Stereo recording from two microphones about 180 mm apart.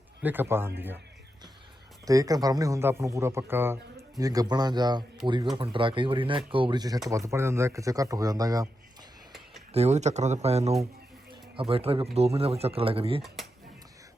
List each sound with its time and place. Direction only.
0.2 s speech: 10° right (ahead or behind)
2.0 s speech: 20° right (ahead or behind)
9.7 s speech: 35° right (ahead or behind)
13.2 s speech: centre (ahead or behind)